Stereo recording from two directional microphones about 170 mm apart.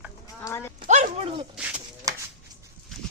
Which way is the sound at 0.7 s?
50° right (ahead or behind).